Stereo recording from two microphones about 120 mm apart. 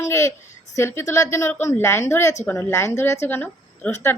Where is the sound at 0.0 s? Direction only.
25° left (ahead or behind).